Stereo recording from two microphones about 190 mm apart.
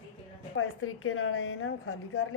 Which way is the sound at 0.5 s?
90° left.